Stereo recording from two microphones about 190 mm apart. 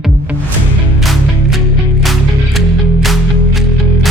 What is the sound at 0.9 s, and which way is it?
Music, centre (ahead or behind).